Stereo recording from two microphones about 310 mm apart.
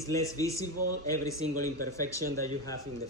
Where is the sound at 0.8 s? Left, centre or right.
Right.